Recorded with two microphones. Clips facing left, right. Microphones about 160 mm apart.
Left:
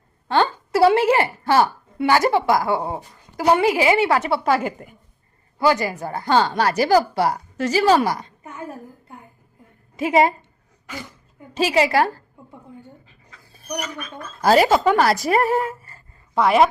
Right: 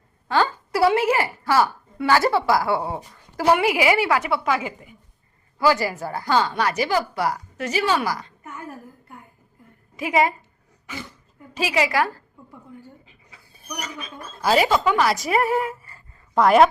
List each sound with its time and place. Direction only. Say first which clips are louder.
0.3 s a woman's voice: left 2 dB; 25° left (ahead or behind)
4.6 s speech: left 5 dB; 50° left (ahead or behind)
5.5 s a woman's voice: left 1 dB; 20° left (ahead or behind)
8.0 s a sound: left 3 dB; 25° left (ahead or behind)
10.0 s a woman's voice: left 4 dB; 30° left (ahead or behind)
11.5 s a woman's voice: left 4 dB; 30° left (ahead or behind)
14.4 s speech: left 4 dB; 40° left (ahead or behind)
16.3 s a woman's voice: right 1 dB; centre (ahead or behind)